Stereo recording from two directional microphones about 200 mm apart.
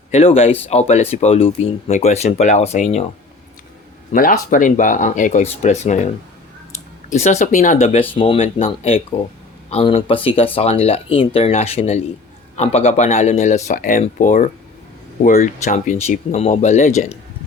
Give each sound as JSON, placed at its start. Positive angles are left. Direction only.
{"t": 0.1, "sound": "speech", "side_deg": 30}
{"t": 4.1, "sound": "speech", "side_deg": 45}
{"t": 7.1, "sound": "speech", "side_deg": 35}
{"t": 8.1, "sound": "speech", "side_deg": 25}